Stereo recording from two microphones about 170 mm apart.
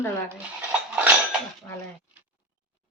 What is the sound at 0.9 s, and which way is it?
Dishes, 5° right (ahead or behind).